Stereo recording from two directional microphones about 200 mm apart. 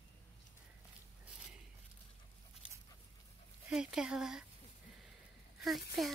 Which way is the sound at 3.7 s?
5° right (ahead or behind).